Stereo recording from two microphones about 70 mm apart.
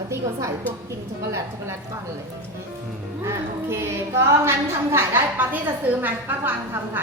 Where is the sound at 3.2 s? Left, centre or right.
Right.